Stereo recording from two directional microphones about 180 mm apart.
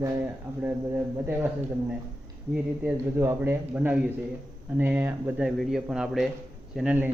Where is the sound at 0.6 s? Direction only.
10° right (ahead or behind).